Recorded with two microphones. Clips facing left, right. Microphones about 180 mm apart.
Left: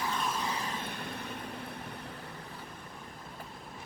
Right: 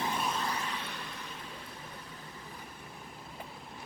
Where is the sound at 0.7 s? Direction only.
50° left (ahead or behind).